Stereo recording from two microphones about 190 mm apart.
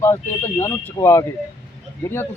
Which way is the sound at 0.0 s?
15° left (ahead or behind).